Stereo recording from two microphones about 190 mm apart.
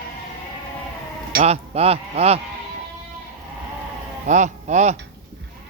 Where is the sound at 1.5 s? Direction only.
30° right (ahead or behind).